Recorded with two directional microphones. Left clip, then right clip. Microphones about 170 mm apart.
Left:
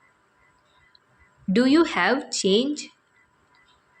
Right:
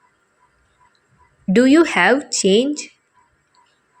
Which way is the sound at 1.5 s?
30° right (ahead or behind).